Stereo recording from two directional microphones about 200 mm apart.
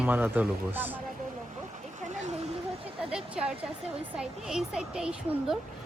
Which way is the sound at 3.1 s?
5° right (ahead or behind).